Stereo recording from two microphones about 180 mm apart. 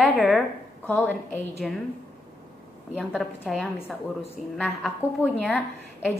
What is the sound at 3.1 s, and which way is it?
A woman's voice, centre (ahead or behind).